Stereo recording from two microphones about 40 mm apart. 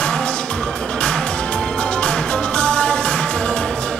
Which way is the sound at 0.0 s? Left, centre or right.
Left.